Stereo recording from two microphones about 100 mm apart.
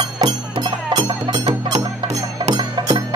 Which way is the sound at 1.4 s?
90° right.